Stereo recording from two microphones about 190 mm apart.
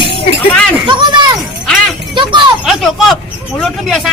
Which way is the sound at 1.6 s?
Centre (ahead or behind).